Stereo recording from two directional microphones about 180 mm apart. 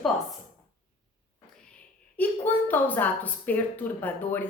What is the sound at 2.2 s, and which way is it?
A woman's voice, 10° left (ahead or behind).